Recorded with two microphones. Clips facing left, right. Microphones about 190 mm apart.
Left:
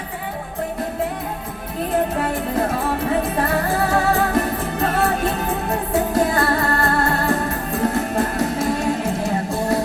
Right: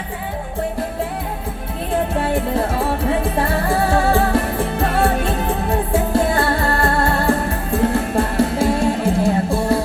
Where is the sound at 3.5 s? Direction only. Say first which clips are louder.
Right 2 dB; 30° right (ahead or behind).